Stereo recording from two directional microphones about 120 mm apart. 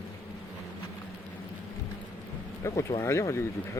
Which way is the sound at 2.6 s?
25° left (ahead or behind).